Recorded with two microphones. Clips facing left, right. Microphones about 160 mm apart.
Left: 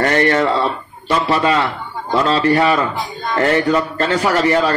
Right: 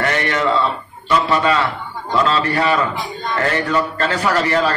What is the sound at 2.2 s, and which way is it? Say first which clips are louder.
Speech: left 6 dB; 30° left (ahead or behind).